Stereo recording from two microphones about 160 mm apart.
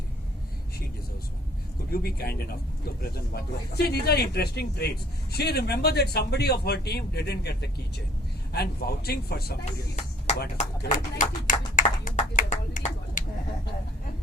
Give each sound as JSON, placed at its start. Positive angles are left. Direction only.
{"t": 1.9, "sound": "speech", "side_deg": 70}
{"t": 8.5, "sound": "speech", "side_deg": 75}
{"t": 10.6, "sound": "speech", "side_deg": 50}
{"t": 11.2, "sound": "clapping", "side_deg": 55}